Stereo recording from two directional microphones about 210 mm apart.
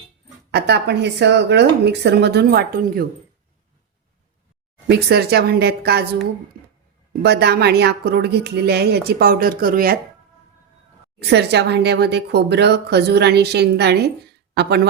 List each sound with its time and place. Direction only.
0.5 s speech: 55° right (ahead or behind)
4.9 s speech: 50° right (ahead or behind)
7.1 s speech: 50° right (ahead or behind)
11.2 s speech: 55° right (ahead or behind)